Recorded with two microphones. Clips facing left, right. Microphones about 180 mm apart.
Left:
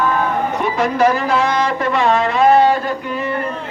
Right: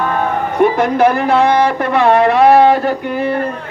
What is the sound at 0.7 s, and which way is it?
Music, 55° right (ahead or behind).